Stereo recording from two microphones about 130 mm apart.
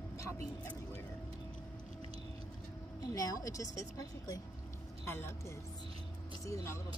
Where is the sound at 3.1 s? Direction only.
25° left (ahead or behind).